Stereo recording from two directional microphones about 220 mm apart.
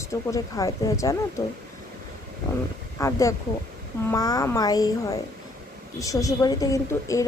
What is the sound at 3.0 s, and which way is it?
A woman's voice, 15° left (ahead or behind).